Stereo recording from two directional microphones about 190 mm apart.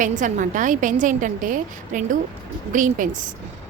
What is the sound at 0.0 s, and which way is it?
A woman's voice, 40° right (ahead or behind).